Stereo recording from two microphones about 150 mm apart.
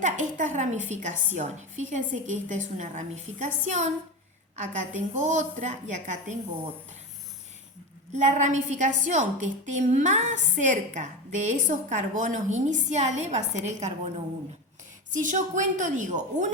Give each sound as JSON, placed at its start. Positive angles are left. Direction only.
{"t": 0.0, "sound": "a woman's voice", "side_deg": -55}
{"t": 8.1, "sound": "a woman's voice", "side_deg": -50}
{"t": 15.1, "sound": "a woman's voice", "side_deg": -55}